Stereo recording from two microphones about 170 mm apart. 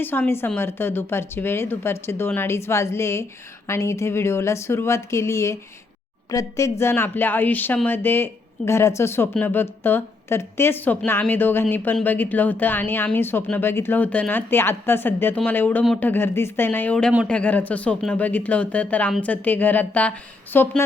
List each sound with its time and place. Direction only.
0.0 s a woman's voice: 10° left (ahead or behind)